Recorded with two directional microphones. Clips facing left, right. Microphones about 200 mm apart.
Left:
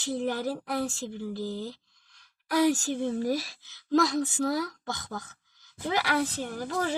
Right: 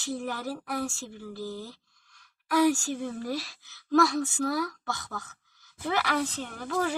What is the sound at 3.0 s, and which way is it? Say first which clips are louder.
Speech: left 5 dB; 25° left (ahead or behind).